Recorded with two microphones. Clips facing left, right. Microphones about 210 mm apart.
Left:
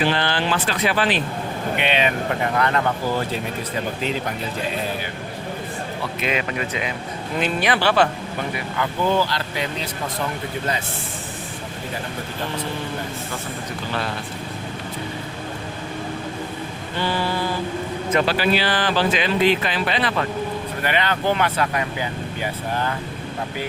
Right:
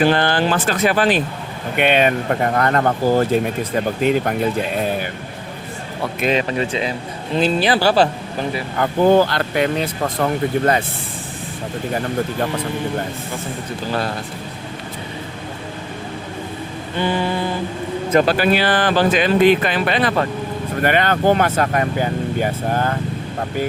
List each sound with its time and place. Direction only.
0.0 s speech: 45° right (ahead or behind)
6.1 s speech: 35° right (ahead or behind)
8.7 s speech: 50° right (ahead or behind)
17.0 s mantra: 20° right (ahead or behind)
18.1 s speech: 45° right (ahead or behind)